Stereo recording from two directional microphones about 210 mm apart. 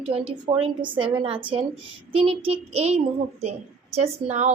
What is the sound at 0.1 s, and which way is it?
A woman's voice, 25° right (ahead or behind).